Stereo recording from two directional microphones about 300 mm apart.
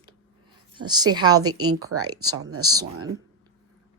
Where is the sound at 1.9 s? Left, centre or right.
Right.